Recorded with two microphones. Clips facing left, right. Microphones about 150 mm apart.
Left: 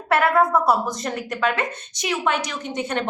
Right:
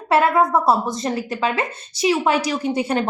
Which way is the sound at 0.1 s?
25° right (ahead or behind).